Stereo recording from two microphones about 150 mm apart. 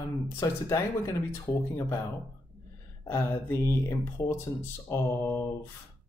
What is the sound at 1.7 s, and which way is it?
Speech, 25° left (ahead or behind).